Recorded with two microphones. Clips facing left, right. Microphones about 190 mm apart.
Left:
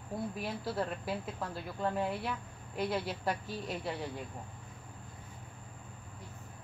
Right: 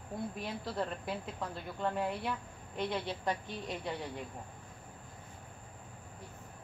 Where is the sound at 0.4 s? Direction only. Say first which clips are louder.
Left 2 dB; 5° left (ahead or behind).